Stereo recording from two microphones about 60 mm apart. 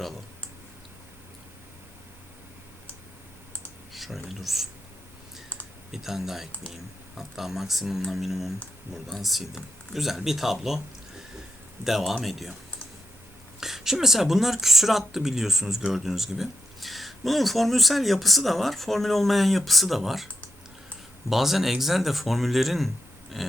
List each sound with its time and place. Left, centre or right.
3.9 s a sound: centre
5.9 s speech: centre
11.9 s speech: centre
13.6 s speech: centre
21.2 s speech: centre